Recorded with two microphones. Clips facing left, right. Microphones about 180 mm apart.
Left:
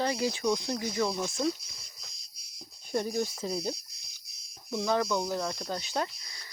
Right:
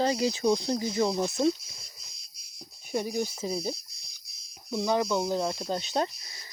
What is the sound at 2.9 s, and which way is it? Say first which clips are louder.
Speech: even; 10° right (ahead or behind).